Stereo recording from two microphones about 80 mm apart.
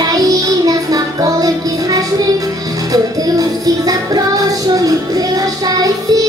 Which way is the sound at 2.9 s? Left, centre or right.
Right.